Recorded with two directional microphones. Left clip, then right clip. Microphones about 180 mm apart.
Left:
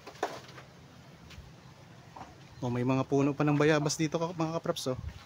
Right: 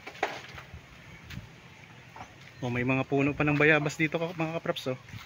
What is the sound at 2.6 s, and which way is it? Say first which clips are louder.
Speech: right 2 dB; 5° left (ahead or behind).